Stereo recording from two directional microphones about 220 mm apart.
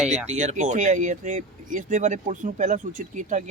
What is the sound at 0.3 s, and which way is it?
Speech, 35° right (ahead or behind).